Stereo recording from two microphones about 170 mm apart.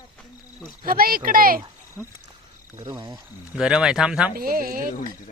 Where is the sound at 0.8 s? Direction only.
60° right (ahead or behind).